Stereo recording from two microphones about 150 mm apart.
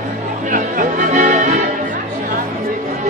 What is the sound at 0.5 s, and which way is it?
Music, 60° right (ahead or behind).